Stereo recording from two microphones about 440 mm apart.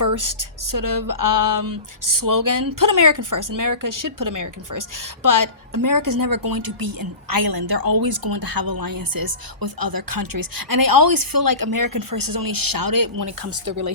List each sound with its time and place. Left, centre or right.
0.0 s a woman's voice: right
13.7 s speech: right